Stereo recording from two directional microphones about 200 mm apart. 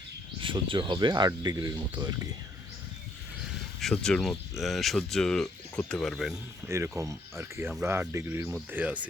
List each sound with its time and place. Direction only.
0.3 s speech: 25° right (ahead or behind)
3.8 s speech: centre (ahead or behind)
6.7 s speech: 15° right (ahead or behind)